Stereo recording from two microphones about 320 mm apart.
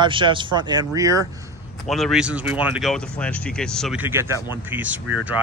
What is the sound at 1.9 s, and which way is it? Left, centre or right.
Speech, centre.